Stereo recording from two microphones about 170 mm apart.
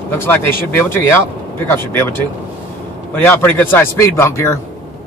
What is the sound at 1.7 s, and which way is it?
Speech, 10° left (ahead or behind).